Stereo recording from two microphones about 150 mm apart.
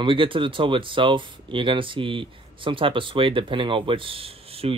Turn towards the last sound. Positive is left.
turn(degrees=-40)  # may be behind; listen again after turning